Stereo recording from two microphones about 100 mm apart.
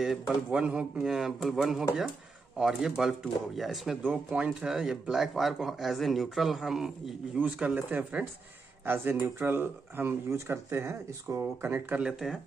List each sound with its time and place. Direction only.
0.0 s speech: 5° right (ahead or behind); by 12.0 s 20° right (ahead or behind)
12.0 s speech: 5° right (ahead or behind)